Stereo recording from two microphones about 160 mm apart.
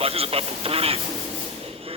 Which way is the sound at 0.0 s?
40° right (ahead or behind).